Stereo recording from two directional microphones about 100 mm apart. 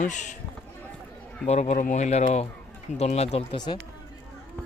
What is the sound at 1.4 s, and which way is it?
Speech, 90° left.